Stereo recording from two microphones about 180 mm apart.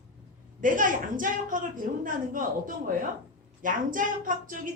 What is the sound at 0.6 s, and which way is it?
A woman's voice, 45° right (ahead or behind).